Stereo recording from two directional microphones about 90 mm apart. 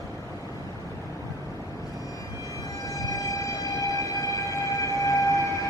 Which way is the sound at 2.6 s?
40° left (ahead or behind).